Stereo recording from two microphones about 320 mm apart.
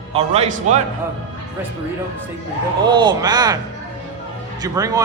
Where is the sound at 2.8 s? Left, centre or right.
Centre.